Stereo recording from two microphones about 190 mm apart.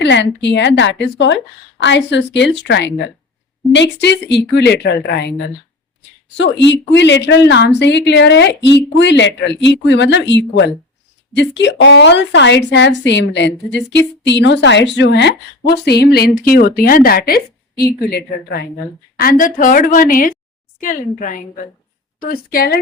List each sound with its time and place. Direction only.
0.0 s a woman's voice: 70° left (ahead or behind)
6.3 s a woman's voice: 70° left (ahead or behind); by 22.8 s 50° left (ahead or behind)